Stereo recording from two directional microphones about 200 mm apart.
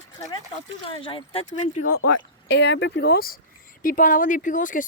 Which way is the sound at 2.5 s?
60° left (ahead or behind).